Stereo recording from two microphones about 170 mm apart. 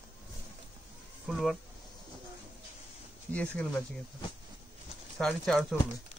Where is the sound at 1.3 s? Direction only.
Centre (ahead or behind).